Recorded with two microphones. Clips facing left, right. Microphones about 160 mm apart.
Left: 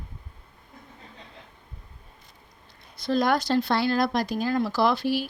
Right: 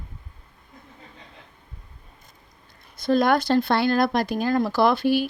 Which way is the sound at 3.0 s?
55° right (ahead or behind).